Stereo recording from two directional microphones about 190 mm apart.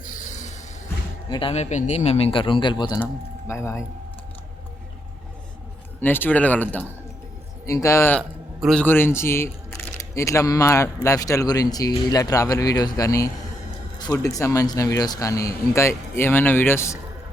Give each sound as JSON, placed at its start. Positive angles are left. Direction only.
{"t": 0.0, "sound": "a sound", "side_deg": 40}
{"t": 1.3, "sound": "speech", "side_deg": 30}
{"t": 6.0, "sound": "a man's voice", "side_deg": 10}